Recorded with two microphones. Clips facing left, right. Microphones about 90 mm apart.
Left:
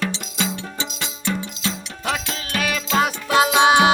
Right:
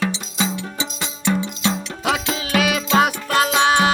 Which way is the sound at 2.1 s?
90° right.